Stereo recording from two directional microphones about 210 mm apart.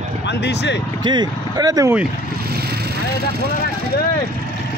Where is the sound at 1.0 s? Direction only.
20° right (ahead or behind).